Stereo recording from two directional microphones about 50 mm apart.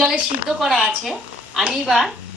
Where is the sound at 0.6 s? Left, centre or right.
Centre.